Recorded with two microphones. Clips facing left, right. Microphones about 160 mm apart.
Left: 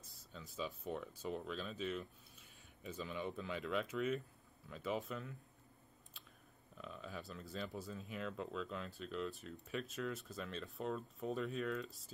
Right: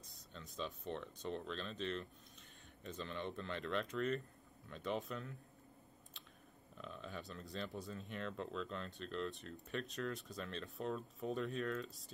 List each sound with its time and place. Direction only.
0.1 s speech: centre (ahead or behind)
6.8 s speech: centre (ahead or behind)